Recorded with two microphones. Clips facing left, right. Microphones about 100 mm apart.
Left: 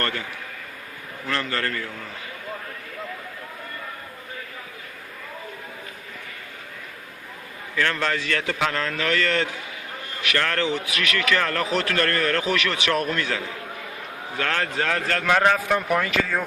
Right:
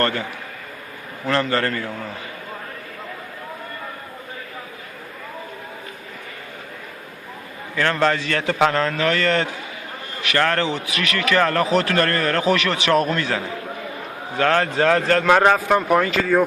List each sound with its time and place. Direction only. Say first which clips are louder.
1.3 s a man's voice: right 6 dB; 30° right (ahead or behind)
7.8 s a man's voice: right 5 dB; 25° right (ahead or behind)